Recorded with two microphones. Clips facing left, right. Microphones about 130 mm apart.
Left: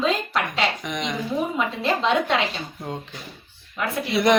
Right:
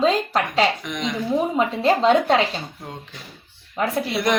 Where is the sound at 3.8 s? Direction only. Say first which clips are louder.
Right 4 dB; 35° right (ahead or behind).